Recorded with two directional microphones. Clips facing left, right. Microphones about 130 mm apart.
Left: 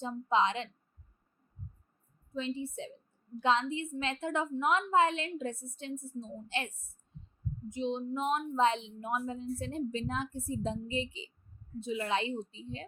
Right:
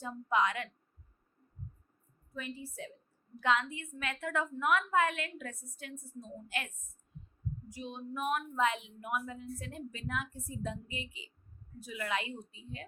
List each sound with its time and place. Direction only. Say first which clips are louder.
0.0 s a woman's voice: left 2 dB; 25° left (ahead or behind)
2.3 s a woman's voice: left 7 dB; 25° left (ahead or behind)
7.1 s heart murmur: even; 25° left (ahead or behind)
7.7 s a woman's voice: left 11 dB; 25° left (ahead or behind)